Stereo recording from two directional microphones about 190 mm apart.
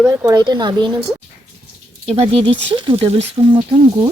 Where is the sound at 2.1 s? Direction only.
30° right (ahead or behind).